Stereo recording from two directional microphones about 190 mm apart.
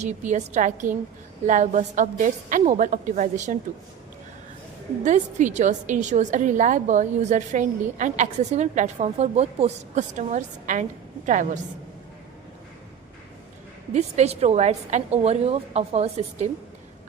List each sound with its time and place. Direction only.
0.0 s a woman's voice: 40° right (ahead or behind)
5.0 s a woman's voice: 40° right (ahead or behind)
13.9 s a woman's voice: 35° right (ahead or behind)